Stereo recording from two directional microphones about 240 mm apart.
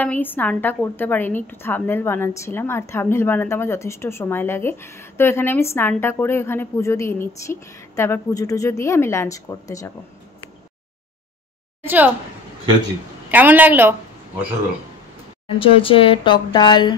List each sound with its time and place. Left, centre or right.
0.0 s a woman's voice: centre
11.8 s a woman's voice: centre
13.3 s a woman's voice: centre
15.4 s speech: left